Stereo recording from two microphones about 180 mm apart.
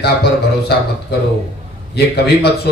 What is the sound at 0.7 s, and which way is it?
Speech, 65° left (ahead or behind).